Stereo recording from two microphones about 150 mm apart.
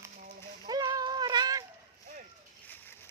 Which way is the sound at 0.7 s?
25° right (ahead or behind).